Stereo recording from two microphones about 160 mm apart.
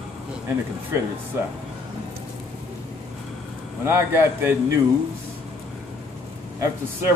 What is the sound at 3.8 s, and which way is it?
Speech, 15° right (ahead or behind).